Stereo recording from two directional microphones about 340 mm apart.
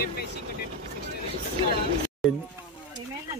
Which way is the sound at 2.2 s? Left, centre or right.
Centre.